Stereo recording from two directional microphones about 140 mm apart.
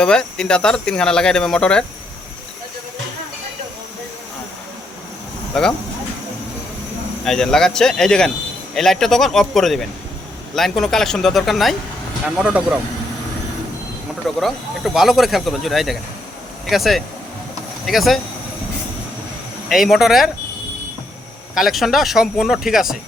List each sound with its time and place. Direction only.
0.0 s speech: 5° left (ahead or behind)
5.5 s speech: 5° left (ahead or behind)
7.3 s speech: 5° left (ahead or behind)
14.3 s speech: centre (ahead or behind)
19.6 s speech: centre (ahead or behind)
21.5 s speech: centre (ahead or behind)